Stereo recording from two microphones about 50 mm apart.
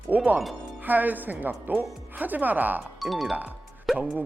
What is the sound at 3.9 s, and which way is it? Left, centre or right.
Music, centre.